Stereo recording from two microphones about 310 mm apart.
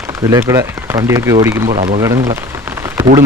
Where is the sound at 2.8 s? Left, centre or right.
Centre.